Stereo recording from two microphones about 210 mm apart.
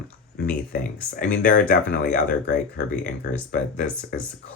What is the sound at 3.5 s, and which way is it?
Speech, 40° left (ahead or behind).